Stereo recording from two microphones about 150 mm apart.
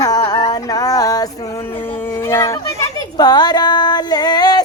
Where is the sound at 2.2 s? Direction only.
20° left (ahead or behind).